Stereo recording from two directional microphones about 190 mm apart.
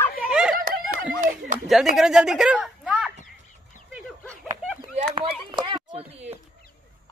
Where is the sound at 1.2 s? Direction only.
45° right (ahead or behind).